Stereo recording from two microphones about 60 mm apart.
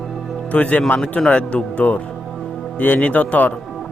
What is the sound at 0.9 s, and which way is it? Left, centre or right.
Speech, centre.